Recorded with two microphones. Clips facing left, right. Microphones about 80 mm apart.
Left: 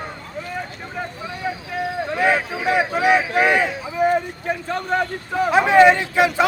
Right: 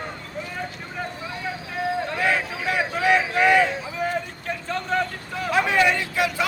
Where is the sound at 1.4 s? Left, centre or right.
Centre.